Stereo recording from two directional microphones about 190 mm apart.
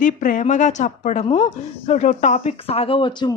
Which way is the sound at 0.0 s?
45° left (ahead or behind).